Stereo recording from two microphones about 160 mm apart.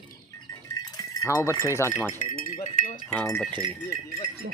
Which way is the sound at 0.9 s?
20° left (ahead or behind).